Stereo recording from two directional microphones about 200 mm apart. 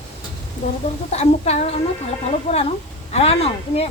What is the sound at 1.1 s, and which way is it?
A woman's voice, 35° left (ahead or behind).